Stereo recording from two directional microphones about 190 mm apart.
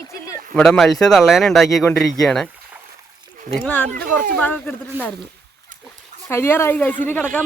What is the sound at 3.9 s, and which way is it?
Speech, 50° right (ahead or behind).